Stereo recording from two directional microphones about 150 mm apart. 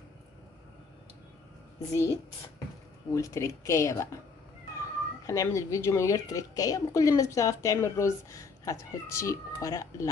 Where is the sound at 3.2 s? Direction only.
20° left (ahead or behind).